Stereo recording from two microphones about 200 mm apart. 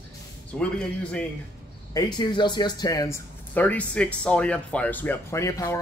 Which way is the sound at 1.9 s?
20° left (ahead or behind).